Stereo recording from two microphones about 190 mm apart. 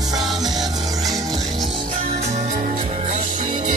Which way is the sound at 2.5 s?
40° right (ahead or behind).